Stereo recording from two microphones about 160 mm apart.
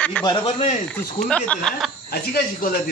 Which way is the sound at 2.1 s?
70° left (ahead or behind).